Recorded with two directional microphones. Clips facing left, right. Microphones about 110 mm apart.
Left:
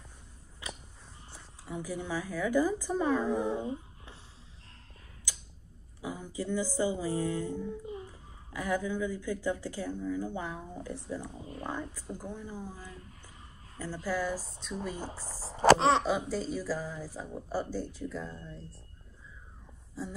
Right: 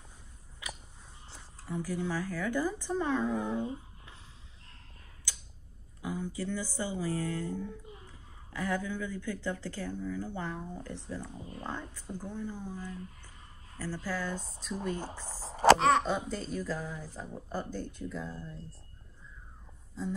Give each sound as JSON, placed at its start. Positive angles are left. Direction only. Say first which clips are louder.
{"t": 0.6, "sound": "a sound", "louder": "left 1 dB", "side_deg": 30}
{"t": 1.3, "sound": "speech", "louder": "right 2 dB", "side_deg": 10}
{"t": 3.4, "sound": "speech", "louder": "left 1 dB", "side_deg": 15}
{"t": 5.9, "sound": "speech", "louder": "right 1 dB", "side_deg": 10}
{"t": 14.3, "sound": "speech", "louder": "left 1 dB", "side_deg": 0}
{"t": 15.1, "sound": "speech", "louder": "even", "side_deg": 40}
{"t": 15.5, "sound": "a sound", "louder": "even", "side_deg": 30}
{"t": 16.0, "sound": "speech", "louder": "left 2 dB", "side_deg": 5}
{"t": 20.0, "sound": "speech", "louder": "right 3 dB", "side_deg": 5}